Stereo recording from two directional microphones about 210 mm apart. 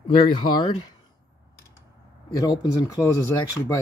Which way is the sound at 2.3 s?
15° left (ahead or behind).